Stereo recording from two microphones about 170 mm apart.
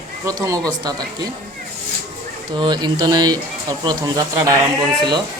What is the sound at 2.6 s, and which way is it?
Speech, 25° right (ahead or behind).